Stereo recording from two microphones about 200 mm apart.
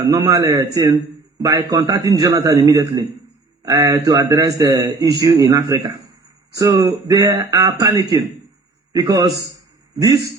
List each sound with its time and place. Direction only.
0.0 s a man's voice: 15° right (ahead or behind)